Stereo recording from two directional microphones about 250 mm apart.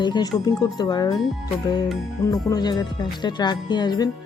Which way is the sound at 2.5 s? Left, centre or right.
Centre.